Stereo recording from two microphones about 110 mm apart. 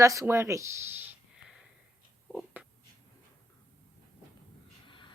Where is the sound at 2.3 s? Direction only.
15° right (ahead or behind).